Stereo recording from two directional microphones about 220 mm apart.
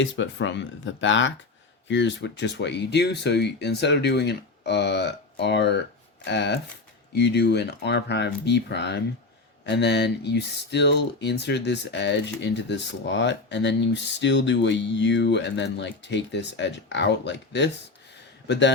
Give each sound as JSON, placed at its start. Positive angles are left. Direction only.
{"t": 0.0, "sound": "speech", "side_deg": 60}